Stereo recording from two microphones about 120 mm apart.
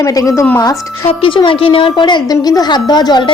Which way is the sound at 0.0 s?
30° left (ahead or behind).